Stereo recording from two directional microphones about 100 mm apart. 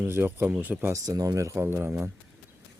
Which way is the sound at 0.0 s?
20° right (ahead or behind).